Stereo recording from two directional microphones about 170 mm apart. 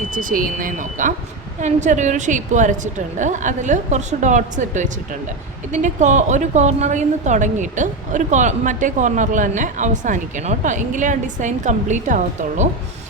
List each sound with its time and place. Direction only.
0.1 s a woman's voice: 55° right (ahead or behind)